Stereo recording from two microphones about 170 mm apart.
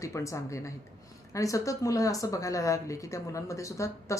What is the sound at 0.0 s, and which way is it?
Speech, 20° left (ahead or behind).